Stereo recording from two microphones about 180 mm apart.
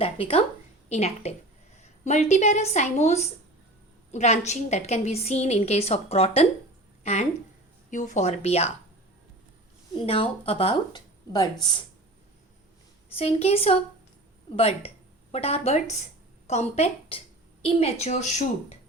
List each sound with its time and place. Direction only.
0.0 s a woman's voice: 30° left (ahead or behind)
9.9 s a woman's voice: 30° left (ahead or behind)
13.1 s a woman's voice: 35° left (ahead or behind)